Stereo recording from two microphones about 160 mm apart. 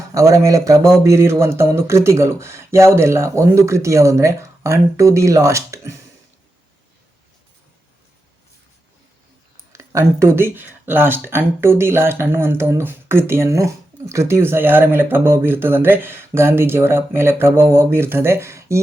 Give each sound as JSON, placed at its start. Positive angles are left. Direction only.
{"t": 0.1, "sound": "speech", "side_deg": -20}
{"t": 9.7, "sound": "speech", "side_deg": -20}